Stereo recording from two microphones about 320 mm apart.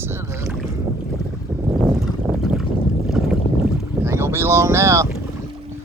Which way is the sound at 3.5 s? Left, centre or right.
Centre.